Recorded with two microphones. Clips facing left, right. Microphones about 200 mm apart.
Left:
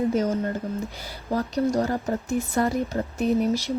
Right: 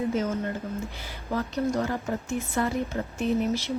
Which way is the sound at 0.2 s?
35° left (ahead or behind).